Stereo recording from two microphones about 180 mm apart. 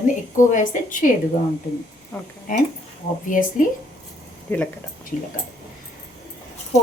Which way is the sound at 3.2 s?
50° left (ahead or behind).